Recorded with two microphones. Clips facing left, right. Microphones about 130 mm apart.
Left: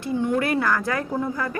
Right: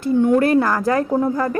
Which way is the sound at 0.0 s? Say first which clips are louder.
Right 8 dB; 45° right (ahead or behind).